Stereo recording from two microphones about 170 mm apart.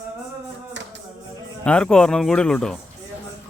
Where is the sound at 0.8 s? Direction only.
90° right.